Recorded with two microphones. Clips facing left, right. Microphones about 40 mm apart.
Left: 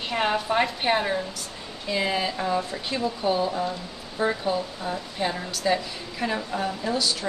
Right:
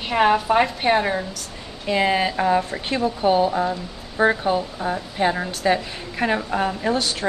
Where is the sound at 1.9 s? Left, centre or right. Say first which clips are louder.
Right 6 dB; right.